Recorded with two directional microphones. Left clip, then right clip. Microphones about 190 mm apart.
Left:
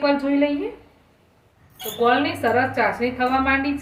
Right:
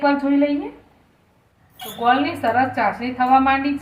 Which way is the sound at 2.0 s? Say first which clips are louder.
Right 1 dB; 15° left (ahead or behind).